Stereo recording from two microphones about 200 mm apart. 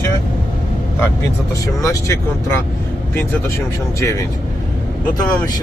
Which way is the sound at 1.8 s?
15° left (ahead or behind).